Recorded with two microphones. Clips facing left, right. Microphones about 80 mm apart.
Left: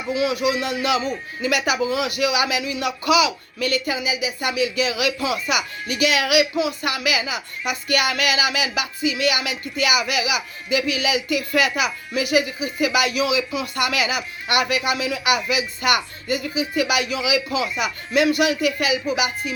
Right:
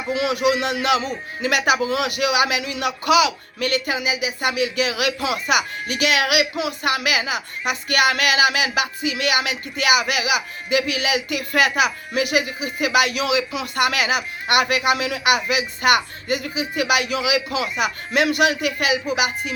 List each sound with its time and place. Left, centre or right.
0.1 s a man's voice: right